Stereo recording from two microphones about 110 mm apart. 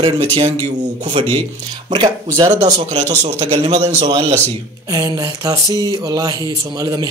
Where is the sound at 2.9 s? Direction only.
90° right.